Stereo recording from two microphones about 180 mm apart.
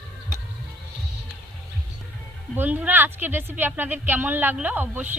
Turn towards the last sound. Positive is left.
turn(degrees=-10)  # may be behind; listen again after turning